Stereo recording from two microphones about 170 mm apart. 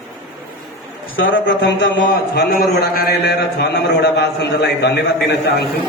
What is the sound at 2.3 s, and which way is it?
A man's voice, 60° left (ahead or behind).